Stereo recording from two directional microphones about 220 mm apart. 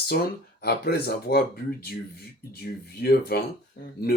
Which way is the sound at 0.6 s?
45° left (ahead or behind).